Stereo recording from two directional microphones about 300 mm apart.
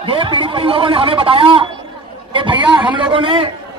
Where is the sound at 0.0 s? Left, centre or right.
Centre.